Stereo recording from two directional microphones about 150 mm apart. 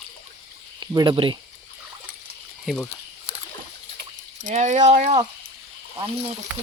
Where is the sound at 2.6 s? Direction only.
5° left (ahead or behind).